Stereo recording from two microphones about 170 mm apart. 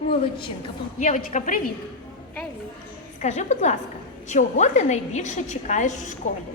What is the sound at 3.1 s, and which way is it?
A woman's voice, 45° left (ahead or behind).